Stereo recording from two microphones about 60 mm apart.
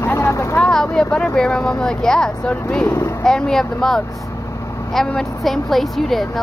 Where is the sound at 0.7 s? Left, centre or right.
Centre.